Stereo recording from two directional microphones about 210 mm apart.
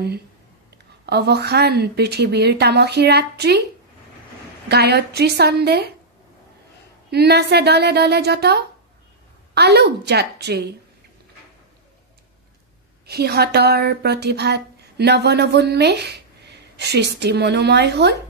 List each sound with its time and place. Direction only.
1.0 s speech: 50° right (ahead or behind)
4.6 s speech: 50° right (ahead or behind)
7.1 s speech: 50° right (ahead or behind)
13.0 s speech: 50° right (ahead or behind)